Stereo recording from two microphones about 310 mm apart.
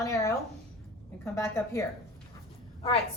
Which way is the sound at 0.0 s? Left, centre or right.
Centre.